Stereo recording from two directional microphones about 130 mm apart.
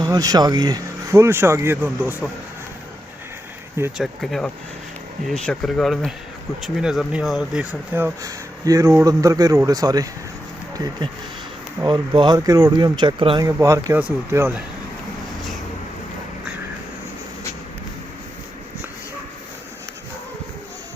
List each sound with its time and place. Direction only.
0.0 s speech: 30° right (ahead or behind); by 2.2 s 15° right (ahead or behind)
3.9 s speech: centre (ahead or behind)
8.2 s speech: 25° right (ahead or behind)
11.9 s speech: 35° right (ahead or behind)
13.4 s speech: 25° right (ahead or behind)